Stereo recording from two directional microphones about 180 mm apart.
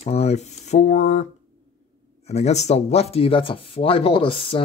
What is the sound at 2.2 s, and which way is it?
Speech, 35° left (ahead or behind).